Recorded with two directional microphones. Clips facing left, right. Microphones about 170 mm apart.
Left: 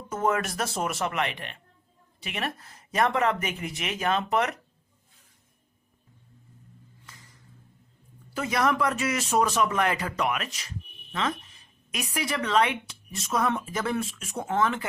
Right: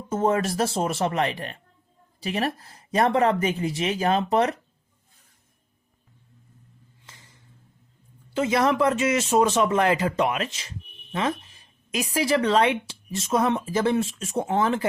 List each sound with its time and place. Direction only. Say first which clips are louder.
0.1 s speech: right 4 dB; 30° right (ahead or behind)
7.0 s a sound: right 2 dB; 25° right (ahead or behind)
8.3 s a man's voice: right 4 dB; 25° right (ahead or behind)